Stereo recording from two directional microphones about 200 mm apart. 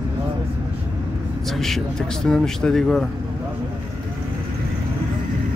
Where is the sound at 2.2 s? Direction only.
Centre (ahead or behind).